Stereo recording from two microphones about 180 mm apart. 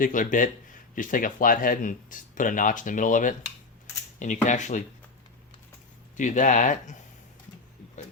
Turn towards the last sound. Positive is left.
turn(degrees=45)  # may be behind; listen again after turning